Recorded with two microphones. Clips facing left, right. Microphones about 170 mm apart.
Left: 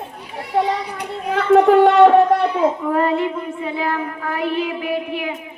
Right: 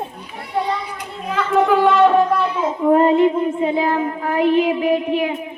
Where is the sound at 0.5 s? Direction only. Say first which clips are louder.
Left 3 dB; 65° left (ahead or behind).